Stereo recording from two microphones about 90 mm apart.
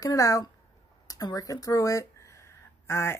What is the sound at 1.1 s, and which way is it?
Speech, 45° left (ahead or behind).